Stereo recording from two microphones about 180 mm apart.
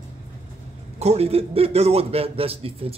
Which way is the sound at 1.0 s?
35° right (ahead or behind).